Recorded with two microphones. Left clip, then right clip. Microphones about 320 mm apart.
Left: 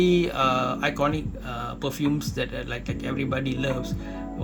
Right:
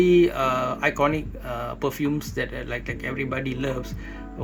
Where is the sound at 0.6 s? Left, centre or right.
Centre.